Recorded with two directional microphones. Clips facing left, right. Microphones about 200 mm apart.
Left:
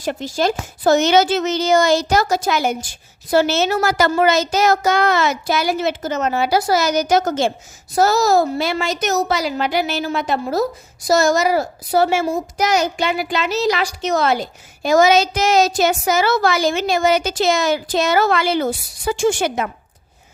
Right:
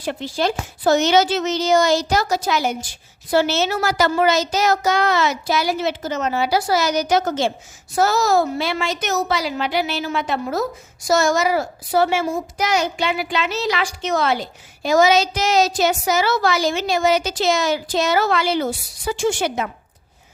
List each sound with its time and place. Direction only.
0.0 s a woman's voice: 45° left (ahead or behind)